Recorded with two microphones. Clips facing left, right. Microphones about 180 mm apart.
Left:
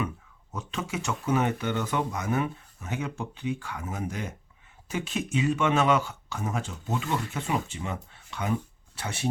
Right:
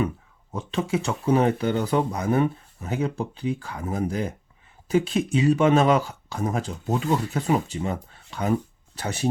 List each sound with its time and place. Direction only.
0.5 s speech: 30° right (ahead or behind)